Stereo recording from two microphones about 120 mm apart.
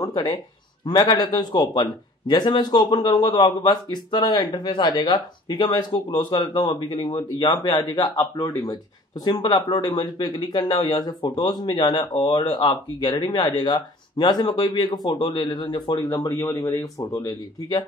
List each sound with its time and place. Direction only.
0.0 s speech: 30° left (ahead or behind)